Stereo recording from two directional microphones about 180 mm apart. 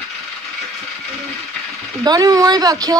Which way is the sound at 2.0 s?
20° right (ahead or behind).